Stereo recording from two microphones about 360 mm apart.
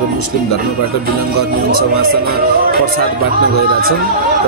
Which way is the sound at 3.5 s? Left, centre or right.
Left.